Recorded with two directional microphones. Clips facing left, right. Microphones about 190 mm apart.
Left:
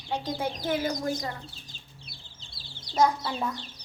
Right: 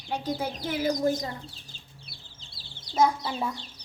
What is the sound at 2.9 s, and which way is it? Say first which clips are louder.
Speech: even; 10° right (ahead or behind).